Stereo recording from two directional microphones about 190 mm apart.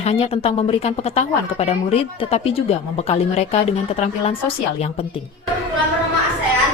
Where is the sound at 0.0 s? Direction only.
30° left (ahead or behind).